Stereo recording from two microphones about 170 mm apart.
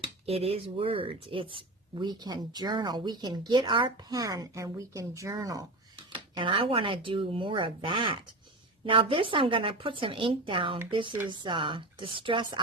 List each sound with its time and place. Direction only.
0.3 s speech: 35° right (ahead or behind)